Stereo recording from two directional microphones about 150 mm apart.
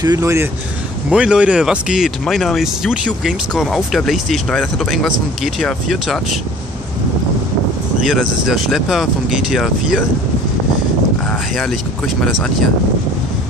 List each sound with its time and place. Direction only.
0.0 s speech: 20° right (ahead or behind)
1.1 s speech: 5° right (ahead or behind)
8.1 s speech: 5° right (ahead or behind)
11.2 s speech: 5° left (ahead or behind)